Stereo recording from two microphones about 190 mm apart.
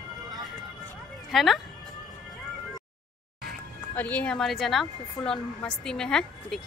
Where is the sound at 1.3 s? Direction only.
Centre (ahead or behind).